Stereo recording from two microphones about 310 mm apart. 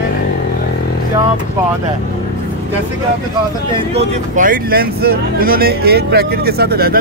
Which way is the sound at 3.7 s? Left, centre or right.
Centre.